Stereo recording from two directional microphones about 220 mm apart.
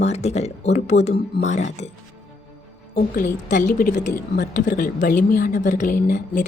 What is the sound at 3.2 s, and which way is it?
A woman's voice, 35° left (ahead or behind).